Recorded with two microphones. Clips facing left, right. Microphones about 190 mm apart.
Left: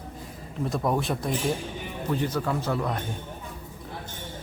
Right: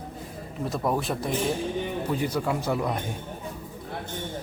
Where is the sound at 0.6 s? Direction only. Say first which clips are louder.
Left 1 dB; centre (ahead or behind).